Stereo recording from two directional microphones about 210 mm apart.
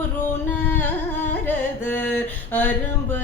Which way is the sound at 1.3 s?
10° left (ahead or behind).